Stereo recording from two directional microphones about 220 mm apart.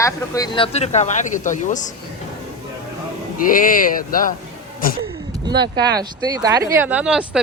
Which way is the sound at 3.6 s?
40° left (ahead or behind).